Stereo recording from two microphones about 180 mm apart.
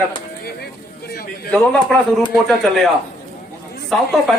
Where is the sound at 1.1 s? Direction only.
60° left (ahead or behind).